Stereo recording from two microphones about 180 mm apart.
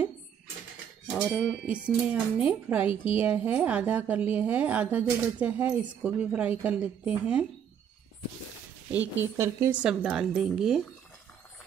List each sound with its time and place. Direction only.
1.1 s a woman's voice: 5° right (ahead or behind)
9.0 s speech: 90° right
9.4 s speech: 10° right (ahead or behind)